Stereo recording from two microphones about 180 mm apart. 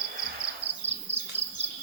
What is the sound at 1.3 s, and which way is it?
Insect, 10° right (ahead or behind).